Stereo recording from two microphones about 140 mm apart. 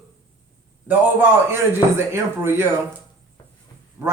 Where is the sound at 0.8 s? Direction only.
15° right (ahead or behind).